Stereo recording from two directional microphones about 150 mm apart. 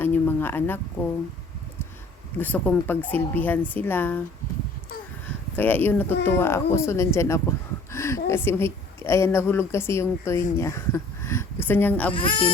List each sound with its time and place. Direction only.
0.0 s speech: 15° left (ahead or behind)
2.4 s speech: 10° left (ahead or behind)
5.5 s a woman's voice: 10° left (ahead or behind)
12.1 s speech: 35° left (ahead or behind)